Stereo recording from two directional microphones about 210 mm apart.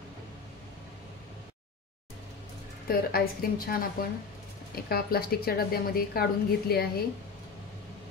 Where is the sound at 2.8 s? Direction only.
45° left (ahead or behind).